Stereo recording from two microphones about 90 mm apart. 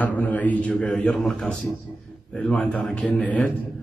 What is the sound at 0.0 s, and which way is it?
A man's voice, 20° left (ahead or behind).